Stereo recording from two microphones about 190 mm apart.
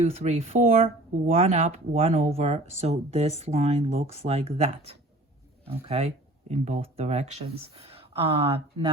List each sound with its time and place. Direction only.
0.0 s speech: 35° right (ahead or behind)